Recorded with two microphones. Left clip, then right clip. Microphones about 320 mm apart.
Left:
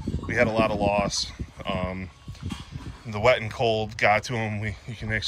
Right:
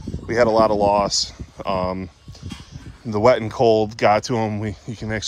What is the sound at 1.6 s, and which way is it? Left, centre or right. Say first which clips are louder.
Speech: right 8 dB; right.